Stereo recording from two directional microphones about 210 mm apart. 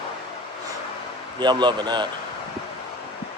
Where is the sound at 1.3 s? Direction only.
20° right (ahead or behind).